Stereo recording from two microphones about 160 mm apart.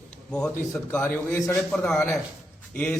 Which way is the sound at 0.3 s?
5° left (ahead or behind).